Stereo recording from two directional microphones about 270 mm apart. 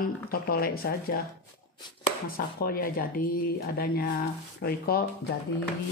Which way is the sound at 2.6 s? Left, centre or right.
Left.